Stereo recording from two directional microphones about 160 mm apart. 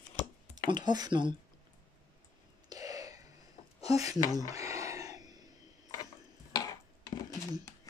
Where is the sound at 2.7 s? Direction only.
20° right (ahead or behind).